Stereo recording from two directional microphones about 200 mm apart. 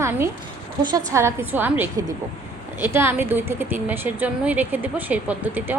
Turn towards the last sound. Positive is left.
turn(degrees=-10)  # may be behind; listen again after turning